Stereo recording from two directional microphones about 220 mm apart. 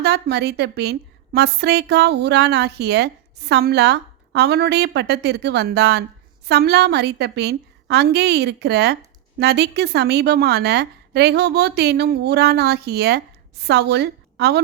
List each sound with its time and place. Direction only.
0.0 s a woman's voice: 50° right (ahead or behind)